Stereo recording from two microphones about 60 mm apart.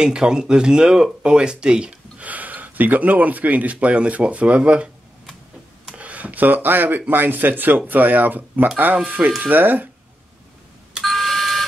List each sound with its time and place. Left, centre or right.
0.0 s speech: centre
5.9 s a sound: right
7.1 s speech: right
11.0 s doorbell: centre